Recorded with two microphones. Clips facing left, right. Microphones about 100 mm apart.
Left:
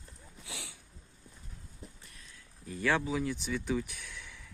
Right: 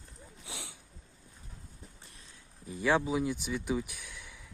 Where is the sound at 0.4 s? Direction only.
20° right (ahead or behind).